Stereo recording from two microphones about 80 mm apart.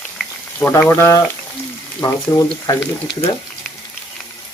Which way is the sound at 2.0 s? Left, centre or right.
Left.